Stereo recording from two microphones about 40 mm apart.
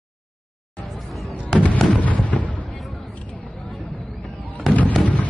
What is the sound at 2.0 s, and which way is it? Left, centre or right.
Fireworks, left.